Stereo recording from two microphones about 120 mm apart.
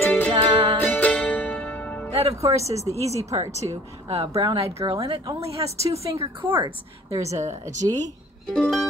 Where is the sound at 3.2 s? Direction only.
25° right (ahead or behind).